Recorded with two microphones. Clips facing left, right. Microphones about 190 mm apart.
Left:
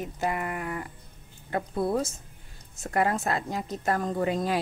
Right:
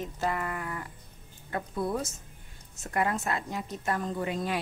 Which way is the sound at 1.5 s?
30° left (ahead or behind).